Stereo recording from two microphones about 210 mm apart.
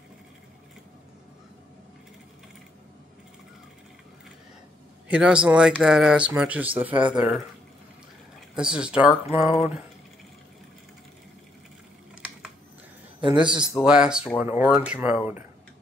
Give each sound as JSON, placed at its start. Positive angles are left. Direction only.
{"t": 5.0, "sound": "speech", "side_deg": -5}
{"t": 8.5, "sound": "speech", "side_deg": -5}
{"t": 13.2, "sound": "a man's voice", "side_deg": -20}
{"t": 13.6, "sound": "speech", "side_deg": -5}